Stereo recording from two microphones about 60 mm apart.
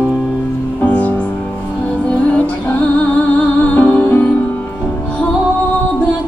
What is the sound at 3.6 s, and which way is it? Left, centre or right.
Music, left.